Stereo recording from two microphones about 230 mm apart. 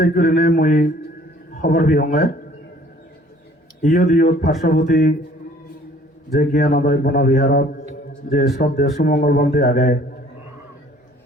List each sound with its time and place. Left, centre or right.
0.0 s speech: left
3.8 s speech: left
6.4 s speech: left